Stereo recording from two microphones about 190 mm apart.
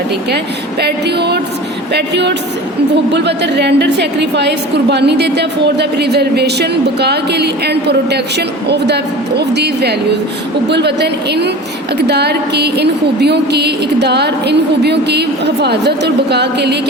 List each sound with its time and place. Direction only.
0.8 s a woman's voice: 60° right (ahead or behind)